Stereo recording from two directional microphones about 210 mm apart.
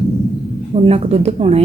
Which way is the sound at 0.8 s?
30° right (ahead or behind).